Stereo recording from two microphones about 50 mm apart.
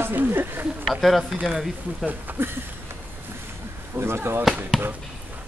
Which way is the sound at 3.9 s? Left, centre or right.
Right.